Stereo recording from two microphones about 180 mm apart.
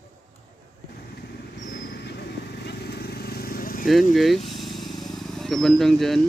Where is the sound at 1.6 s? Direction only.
55° left (ahead or behind).